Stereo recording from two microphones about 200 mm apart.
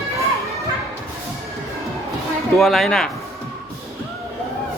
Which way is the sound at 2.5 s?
Centre (ahead or behind).